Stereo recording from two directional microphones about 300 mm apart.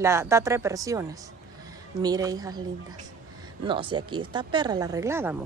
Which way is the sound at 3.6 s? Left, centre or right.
Centre.